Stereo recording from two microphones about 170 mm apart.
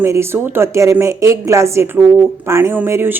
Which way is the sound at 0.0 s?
15° right (ahead or behind).